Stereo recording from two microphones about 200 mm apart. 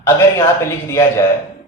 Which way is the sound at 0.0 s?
15° left (ahead or behind).